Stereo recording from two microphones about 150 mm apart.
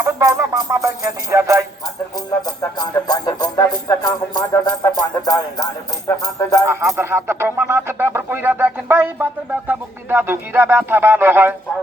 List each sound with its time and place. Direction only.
0.0 s music: 20° right (ahead or behind)
1.3 s speech: 20° right (ahead or behind)
2.1 s speech: 25° left (ahead or behind)
6.7 s speech: 15° right (ahead or behind)